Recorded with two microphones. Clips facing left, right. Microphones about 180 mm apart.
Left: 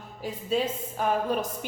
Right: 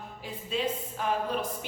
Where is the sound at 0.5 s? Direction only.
40° left (ahead or behind).